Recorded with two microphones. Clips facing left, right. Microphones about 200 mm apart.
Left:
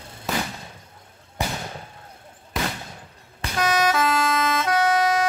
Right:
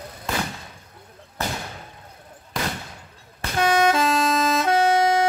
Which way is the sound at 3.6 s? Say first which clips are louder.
Right 2 dB; 25° right (ahead or behind).